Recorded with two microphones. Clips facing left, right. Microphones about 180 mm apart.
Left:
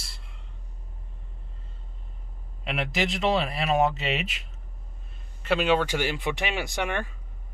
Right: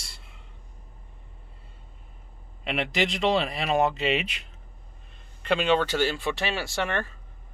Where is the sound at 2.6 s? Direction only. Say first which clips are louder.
Right 1 dB; centre (ahead or behind).